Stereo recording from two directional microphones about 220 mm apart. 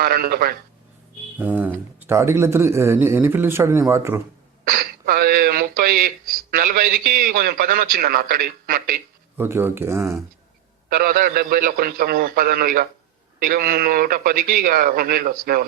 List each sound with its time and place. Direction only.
0.0 s speech: 45° right (ahead or behind)
1.4 s speech: 10° right (ahead or behind)
4.6 s speech: 45° right (ahead or behind)
9.4 s speech: 10° right (ahead or behind)
10.8 s speech: 40° right (ahead or behind)